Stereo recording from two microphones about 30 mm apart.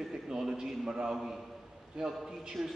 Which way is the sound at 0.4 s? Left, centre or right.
Centre.